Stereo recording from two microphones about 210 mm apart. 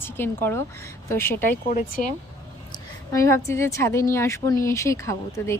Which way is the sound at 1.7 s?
40° left (ahead or behind).